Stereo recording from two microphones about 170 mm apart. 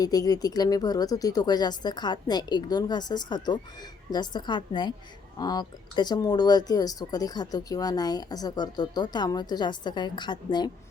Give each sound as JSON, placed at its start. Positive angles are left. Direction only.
{"t": 0.0, "sound": "speech", "side_deg": 20}